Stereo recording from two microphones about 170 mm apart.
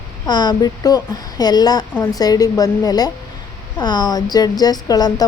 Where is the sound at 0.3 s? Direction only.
25° left (ahead or behind).